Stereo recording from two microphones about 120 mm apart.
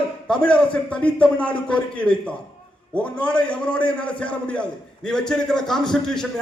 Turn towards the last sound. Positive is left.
turn(degrees=5)  # may be behind; listen again after turning